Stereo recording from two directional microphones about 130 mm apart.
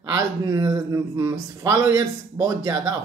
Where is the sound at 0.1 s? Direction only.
25° right (ahead or behind).